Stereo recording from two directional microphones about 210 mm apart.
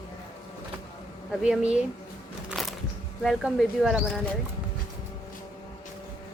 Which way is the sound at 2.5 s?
Centre (ahead or behind).